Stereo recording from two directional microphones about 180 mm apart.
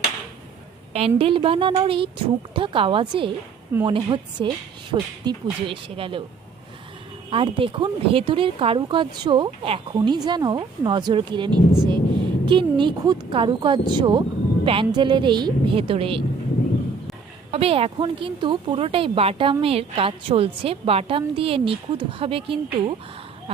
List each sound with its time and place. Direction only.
0.9 s a woman's voice: 30° right (ahead or behind)
7.3 s a woman's voice: 30° right (ahead or behind)
17.5 s a woman's voice: 30° right (ahead or behind)